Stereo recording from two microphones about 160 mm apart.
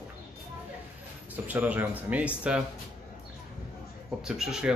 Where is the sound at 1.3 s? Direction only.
10° right (ahead or behind).